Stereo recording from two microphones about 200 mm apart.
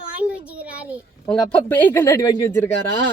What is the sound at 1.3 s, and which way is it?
Speech, 5° left (ahead or behind).